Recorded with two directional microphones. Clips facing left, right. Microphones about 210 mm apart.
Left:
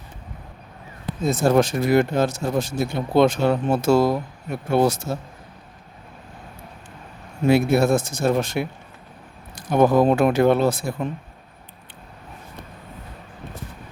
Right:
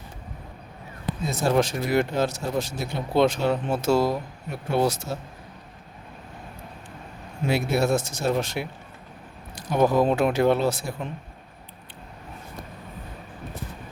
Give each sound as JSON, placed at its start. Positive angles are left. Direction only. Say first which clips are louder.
{"t": 1.3, "sound": "speech", "louder": "left 5 dB", "side_deg": 50}
{"t": 7.4, "sound": "speech", "louder": "left 6 dB", "side_deg": 50}